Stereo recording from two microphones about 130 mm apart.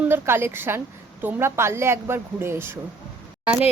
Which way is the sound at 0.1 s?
20° right (ahead or behind).